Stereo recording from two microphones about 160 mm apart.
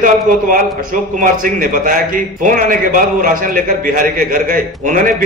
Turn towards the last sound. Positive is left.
turn(degrees=-55)  # may be behind; listen again after turning